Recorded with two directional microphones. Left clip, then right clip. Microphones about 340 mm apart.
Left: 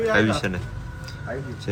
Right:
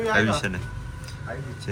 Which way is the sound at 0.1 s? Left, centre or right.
Centre.